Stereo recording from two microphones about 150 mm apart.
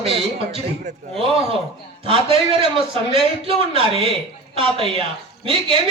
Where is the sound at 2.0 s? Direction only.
40° right (ahead or behind).